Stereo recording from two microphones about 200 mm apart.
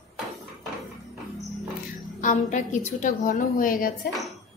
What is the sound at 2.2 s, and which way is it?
A woman's voice, 40° left (ahead or behind).